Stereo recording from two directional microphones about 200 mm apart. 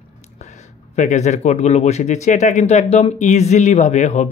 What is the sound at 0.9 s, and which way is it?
Speech, 35° left (ahead or behind).